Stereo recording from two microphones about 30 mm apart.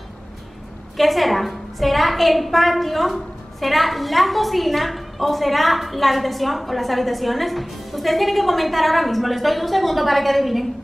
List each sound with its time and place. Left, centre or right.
0.9 s a woman's voice: centre